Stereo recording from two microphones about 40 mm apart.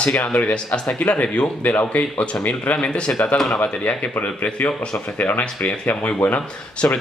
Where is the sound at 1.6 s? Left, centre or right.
Left.